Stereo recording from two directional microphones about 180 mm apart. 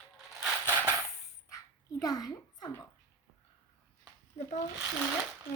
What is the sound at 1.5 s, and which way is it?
Dog, 20° left (ahead or behind).